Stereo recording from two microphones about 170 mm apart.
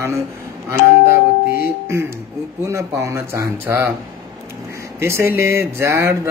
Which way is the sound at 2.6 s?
15° right (ahead or behind).